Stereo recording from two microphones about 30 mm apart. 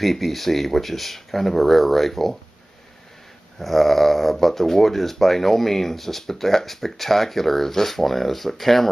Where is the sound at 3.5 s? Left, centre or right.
Centre.